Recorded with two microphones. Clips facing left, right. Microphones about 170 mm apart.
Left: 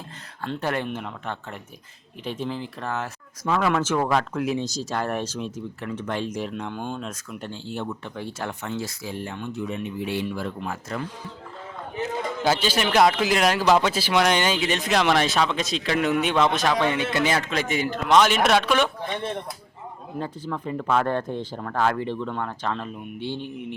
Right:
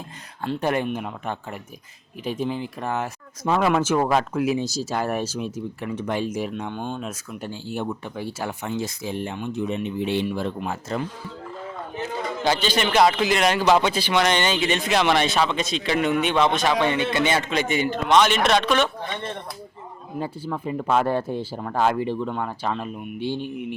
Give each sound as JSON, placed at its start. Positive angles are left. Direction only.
{"t": 0.4, "sound": "speech", "side_deg": -15}
{"t": 3.7, "sound": "speech", "side_deg": -10}
{"t": 8.7, "sound": "speech", "side_deg": -20}
{"t": 12.4, "sound": "a man's voice", "side_deg": 5}
{"t": 20.1, "sound": "speech", "side_deg": -10}